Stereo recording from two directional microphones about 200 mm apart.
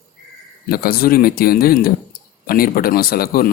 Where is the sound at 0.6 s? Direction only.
50° left (ahead or behind).